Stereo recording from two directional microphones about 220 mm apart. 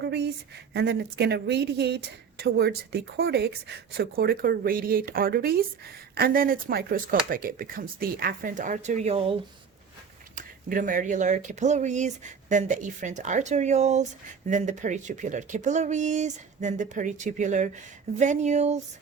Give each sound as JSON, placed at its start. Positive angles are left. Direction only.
{"t": 0.0, "sound": "a woman's voice", "side_deg": -50}
{"t": 10.3, "sound": "speech", "side_deg": -35}